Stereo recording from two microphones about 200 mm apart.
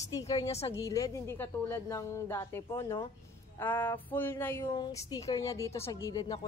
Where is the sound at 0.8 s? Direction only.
15° left (ahead or behind).